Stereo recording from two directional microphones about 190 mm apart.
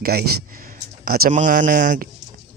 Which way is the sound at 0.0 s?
55° right (ahead or behind).